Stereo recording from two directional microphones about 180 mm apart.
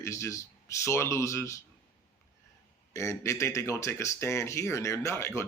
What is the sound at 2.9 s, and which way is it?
Speech, 15° left (ahead or behind).